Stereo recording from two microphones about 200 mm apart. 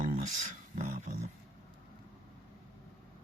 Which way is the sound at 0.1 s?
40° right (ahead or behind).